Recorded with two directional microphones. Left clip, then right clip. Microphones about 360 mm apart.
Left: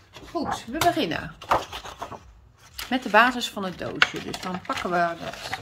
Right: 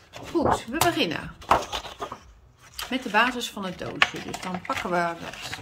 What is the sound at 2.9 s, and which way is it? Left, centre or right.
Speech, centre.